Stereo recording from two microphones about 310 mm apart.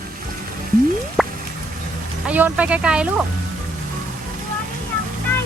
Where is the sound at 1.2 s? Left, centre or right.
Centre.